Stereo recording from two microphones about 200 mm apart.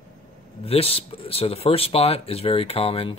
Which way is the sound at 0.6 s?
30° left (ahead or behind).